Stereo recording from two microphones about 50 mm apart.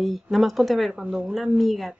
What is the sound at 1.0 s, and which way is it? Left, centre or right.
Speech, right.